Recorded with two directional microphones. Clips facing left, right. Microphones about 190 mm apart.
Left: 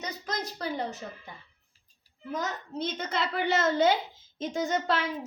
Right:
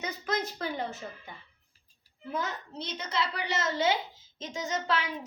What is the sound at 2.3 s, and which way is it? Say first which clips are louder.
A woman's voice: left 2 dB; 45° left (ahead or behind).